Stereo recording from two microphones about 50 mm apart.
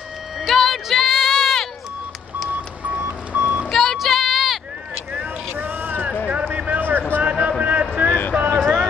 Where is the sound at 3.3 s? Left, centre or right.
Right.